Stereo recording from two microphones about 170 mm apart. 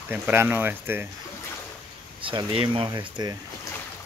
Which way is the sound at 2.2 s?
30° right (ahead or behind).